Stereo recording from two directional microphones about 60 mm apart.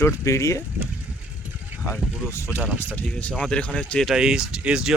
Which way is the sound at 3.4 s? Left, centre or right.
Centre.